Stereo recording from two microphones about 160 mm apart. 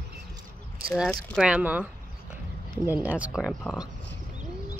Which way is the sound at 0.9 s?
Centre (ahead or behind).